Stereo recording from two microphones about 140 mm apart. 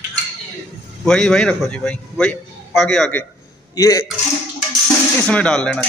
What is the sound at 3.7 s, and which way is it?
Speech, 25° left (ahead or behind).